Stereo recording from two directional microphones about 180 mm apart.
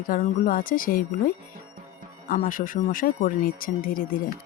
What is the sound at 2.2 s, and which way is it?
Speech, 50° left (ahead or behind).